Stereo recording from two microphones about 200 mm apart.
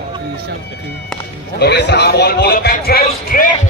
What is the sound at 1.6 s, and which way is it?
Speech, 55° left (ahead or behind).